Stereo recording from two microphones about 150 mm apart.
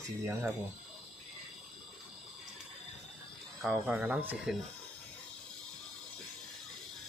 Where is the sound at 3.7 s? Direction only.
10° right (ahead or behind).